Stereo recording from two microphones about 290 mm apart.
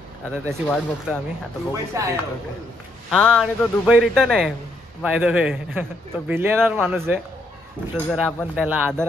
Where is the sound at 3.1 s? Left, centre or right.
Centre.